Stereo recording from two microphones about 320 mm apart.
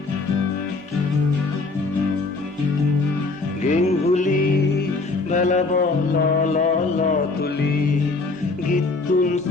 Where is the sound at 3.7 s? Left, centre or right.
Left.